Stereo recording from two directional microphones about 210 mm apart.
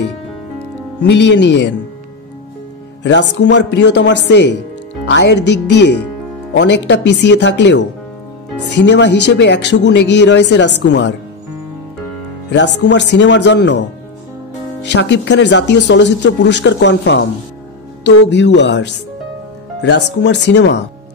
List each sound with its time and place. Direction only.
1.3 s speech: 55° left (ahead or behind)
3.0 s speech: 55° left (ahead or behind)
12.4 s speech: 55° left (ahead or behind)
14.9 s speech: 55° left (ahead or behind)